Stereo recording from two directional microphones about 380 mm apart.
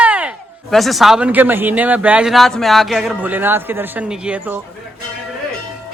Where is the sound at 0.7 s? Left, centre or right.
Centre.